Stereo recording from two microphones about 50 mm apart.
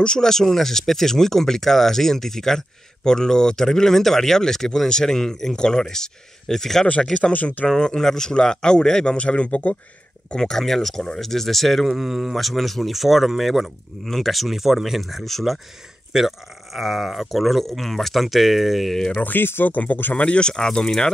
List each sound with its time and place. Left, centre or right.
0.0 s speech: centre
7.3 s speech: left
7.6 s speech: centre
10.3 s speech: centre
18.9 s speech: centre
19.2 s speech: left
20.2 s speech: centre